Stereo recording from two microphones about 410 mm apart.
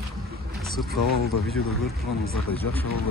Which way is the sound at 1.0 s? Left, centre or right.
Left.